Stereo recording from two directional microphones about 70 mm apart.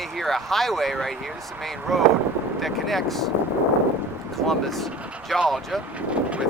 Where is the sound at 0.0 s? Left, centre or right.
Centre.